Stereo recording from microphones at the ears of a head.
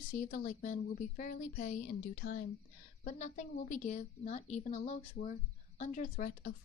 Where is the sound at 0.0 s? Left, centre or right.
Left.